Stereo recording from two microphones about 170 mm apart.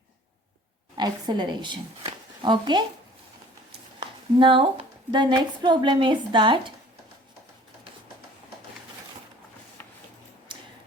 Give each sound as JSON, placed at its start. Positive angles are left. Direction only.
{"t": 0.9, "sound": "a woman's voice", "side_deg": -25}
{"t": 4.4, "sound": "a woman's voice", "side_deg": -30}
{"t": 9.8, "sound": "a sound", "side_deg": 10}